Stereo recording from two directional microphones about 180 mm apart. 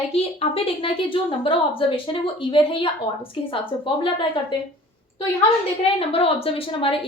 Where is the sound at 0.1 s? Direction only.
30° left (ahead or behind).